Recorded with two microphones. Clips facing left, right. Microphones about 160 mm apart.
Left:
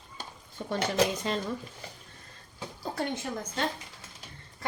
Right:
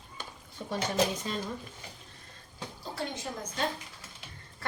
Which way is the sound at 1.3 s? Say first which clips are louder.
Left 4 dB; 80° left.